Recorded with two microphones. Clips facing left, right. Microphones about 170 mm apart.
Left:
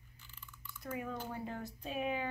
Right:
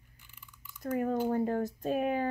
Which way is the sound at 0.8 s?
45° right (ahead or behind).